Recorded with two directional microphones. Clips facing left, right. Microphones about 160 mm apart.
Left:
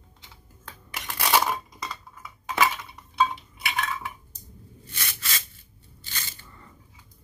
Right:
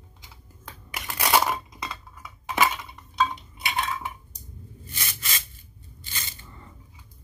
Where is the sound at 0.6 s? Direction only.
10° right (ahead or behind).